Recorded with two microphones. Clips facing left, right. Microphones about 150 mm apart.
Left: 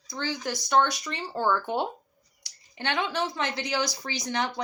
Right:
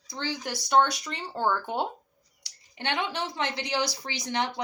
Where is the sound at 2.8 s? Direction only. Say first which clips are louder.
Left 2 dB; 20° right (ahead or behind).